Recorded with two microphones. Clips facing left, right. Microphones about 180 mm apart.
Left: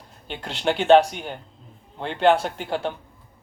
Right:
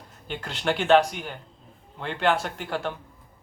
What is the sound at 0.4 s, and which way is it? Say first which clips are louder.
A man's voice: left 5 dB; 25° left (ahead or behind).